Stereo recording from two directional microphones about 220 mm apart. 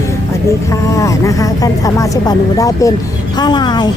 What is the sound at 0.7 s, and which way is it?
A woman's voice, 15° left (ahead or behind).